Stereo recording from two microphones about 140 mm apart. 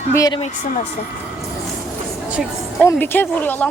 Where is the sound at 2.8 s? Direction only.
15° left (ahead or behind).